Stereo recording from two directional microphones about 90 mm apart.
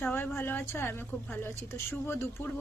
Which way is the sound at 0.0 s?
20° left (ahead or behind).